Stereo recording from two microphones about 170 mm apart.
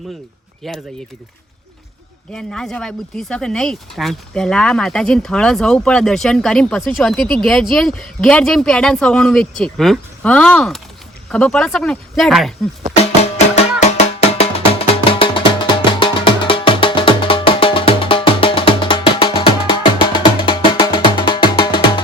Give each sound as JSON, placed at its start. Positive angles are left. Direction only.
{"t": 0.6, "sound": "speech", "side_deg": 0}
{"t": 2.3, "sound": "speech", "side_deg": 5}
{"t": 13.0, "sound": "music", "side_deg": 40}